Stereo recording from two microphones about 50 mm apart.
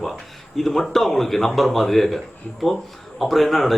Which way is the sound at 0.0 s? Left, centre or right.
Centre.